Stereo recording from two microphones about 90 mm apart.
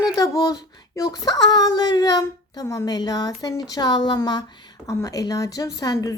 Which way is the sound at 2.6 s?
40° left (ahead or behind).